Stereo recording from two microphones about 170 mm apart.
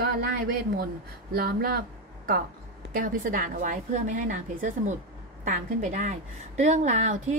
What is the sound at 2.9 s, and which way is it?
A woman's voice, 55° right (ahead or behind).